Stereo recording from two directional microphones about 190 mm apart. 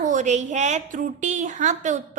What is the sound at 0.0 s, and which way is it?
A woman's voice, 40° right (ahead or behind).